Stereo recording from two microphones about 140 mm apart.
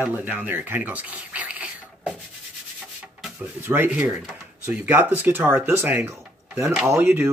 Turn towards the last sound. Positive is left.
turn(degrees=-15)  # may be behind; listen again after turning